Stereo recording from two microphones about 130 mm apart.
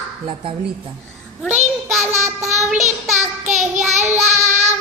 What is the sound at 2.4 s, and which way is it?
Child singing, 65° right (ahead or behind).